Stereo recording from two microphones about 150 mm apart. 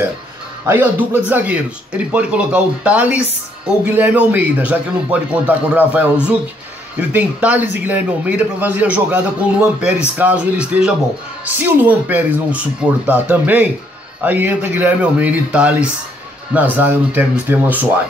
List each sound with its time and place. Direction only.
0.7 s a man's voice: 15° right (ahead or behind)